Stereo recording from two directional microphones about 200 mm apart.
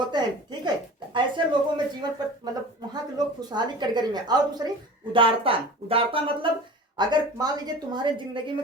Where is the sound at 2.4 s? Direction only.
20° right (ahead or behind).